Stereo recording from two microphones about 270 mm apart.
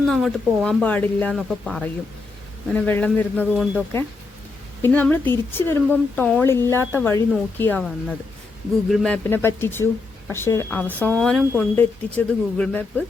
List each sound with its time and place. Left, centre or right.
0.0 s speech: centre